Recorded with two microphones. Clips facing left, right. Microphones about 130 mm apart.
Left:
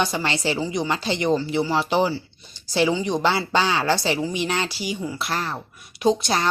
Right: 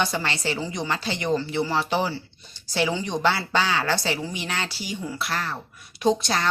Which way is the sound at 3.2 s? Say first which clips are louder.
Left 2 dB; 20° left (ahead or behind).